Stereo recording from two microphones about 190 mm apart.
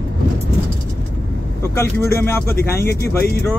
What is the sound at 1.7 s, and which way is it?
Speech, 15° left (ahead or behind).